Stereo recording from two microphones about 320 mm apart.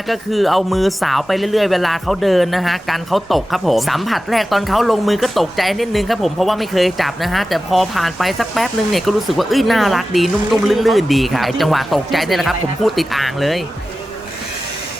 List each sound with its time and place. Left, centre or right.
0.1 s speech: centre